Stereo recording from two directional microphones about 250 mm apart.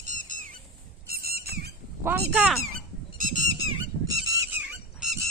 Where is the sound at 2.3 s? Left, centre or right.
Centre.